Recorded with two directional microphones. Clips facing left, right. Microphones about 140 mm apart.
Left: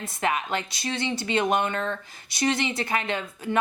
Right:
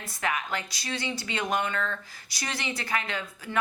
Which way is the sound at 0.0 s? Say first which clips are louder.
Left 4 dB; 25° left (ahead or behind).